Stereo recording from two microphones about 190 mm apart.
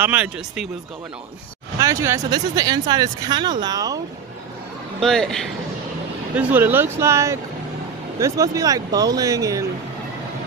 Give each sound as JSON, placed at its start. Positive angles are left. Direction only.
{"t": 0.0, "sound": "speech", "side_deg": -5}
{"t": 1.8, "sound": "speech", "side_deg": -15}
{"t": 5.0, "sound": "a man's voice", "side_deg": 5}
{"t": 6.3, "sound": "speech", "side_deg": -10}